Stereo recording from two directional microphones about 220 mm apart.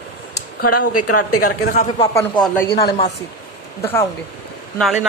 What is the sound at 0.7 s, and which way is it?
A woman's voice, 90° left.